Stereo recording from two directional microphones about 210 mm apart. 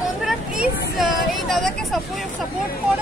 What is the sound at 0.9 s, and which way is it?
Speech, centre (ahead or behind).